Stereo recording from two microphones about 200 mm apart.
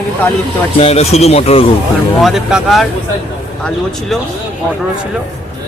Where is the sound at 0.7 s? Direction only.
30° left (ahead or behind).